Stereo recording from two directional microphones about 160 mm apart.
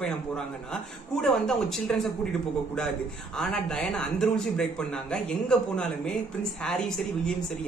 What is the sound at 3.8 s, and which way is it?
Speech, 5° left (ahead or behind).